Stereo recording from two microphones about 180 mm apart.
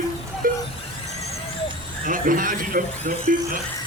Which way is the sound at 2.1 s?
50° right (ahead or behind).